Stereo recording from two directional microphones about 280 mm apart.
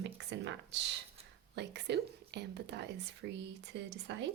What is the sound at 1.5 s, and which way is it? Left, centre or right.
Speech, right.